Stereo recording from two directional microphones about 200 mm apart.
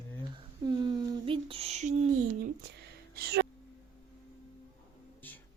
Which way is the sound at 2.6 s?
55° right (ahead or behind).